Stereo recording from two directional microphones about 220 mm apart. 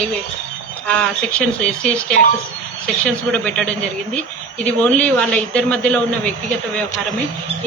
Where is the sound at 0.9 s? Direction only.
5° left (ahead or behind).